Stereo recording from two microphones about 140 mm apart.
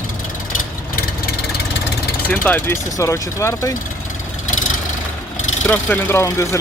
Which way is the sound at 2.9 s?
20° left (ahead or behind).